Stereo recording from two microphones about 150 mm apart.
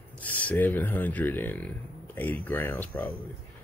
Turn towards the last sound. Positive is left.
turn(degrees=10)  # may be behind; listen again after turning